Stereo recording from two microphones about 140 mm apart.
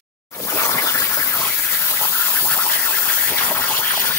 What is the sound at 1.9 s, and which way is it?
Scratch, 15° left (ahead or behind).